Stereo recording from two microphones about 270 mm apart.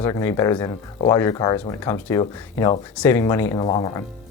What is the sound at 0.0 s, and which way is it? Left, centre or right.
Speech, centre.